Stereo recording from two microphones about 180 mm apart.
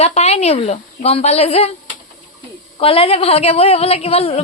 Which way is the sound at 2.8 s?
30° left (ahead or behind).